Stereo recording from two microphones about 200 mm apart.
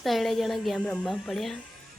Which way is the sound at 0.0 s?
Centre (ahead or behind).